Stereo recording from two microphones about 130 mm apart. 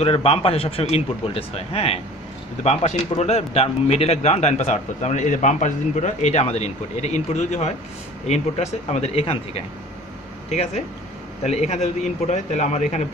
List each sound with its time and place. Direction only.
0.0 s a man's voice: 50° left (ahead or behind)